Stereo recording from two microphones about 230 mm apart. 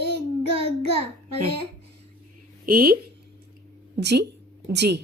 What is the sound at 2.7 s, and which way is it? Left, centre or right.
Speech, right.